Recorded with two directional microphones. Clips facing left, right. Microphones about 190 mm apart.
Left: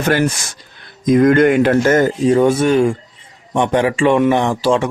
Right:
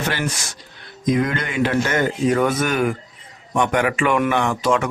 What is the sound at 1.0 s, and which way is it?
Speech, 50° left (ahead or behind).